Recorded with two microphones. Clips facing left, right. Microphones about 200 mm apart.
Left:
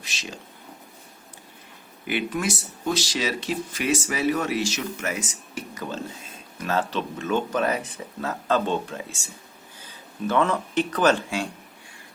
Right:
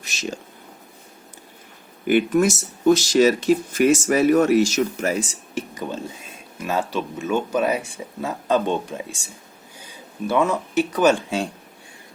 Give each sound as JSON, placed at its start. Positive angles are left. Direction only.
{"t": 0.0, "sound": "speech", "side_deg": -45}
{"t": 2.0, "sound": "speech", "side_deg": -45}
{"t": 6.6, "sound": "speech", "side_deg": -10}